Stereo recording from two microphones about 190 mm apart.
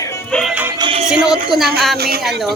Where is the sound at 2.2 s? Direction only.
Centre (ahead or behind).